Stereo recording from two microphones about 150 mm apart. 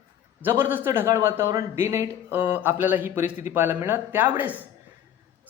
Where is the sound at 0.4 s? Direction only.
15° right (ahead or behind).